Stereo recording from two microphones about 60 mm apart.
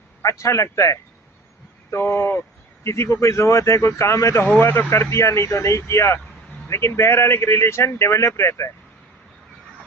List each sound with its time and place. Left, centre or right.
0.2 s speech: left
1.9 s speech: left